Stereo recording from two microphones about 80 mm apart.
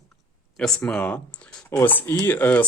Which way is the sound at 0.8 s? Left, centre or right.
Centre.